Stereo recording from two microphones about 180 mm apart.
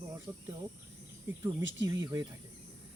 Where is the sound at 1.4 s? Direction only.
20° right (ahead or behind).